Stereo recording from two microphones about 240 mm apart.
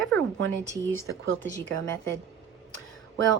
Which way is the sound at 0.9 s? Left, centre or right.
Right.